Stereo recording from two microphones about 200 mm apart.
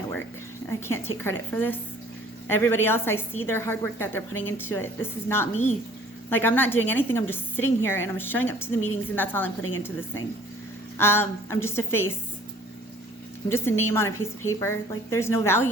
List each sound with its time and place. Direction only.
0.7 s a woman's voice: 10° left (ahead or behind)
10.9 s a woman's voice: 10° left (ahead or behind)
13.5 s a woman's voice: 10° left (ahead or behind)